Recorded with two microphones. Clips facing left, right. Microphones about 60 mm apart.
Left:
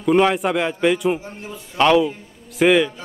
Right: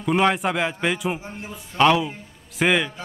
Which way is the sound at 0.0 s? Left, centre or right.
Centre.